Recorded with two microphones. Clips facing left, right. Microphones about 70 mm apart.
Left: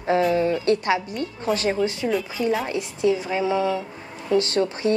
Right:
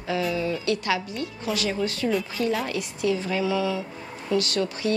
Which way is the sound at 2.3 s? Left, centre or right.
Centre.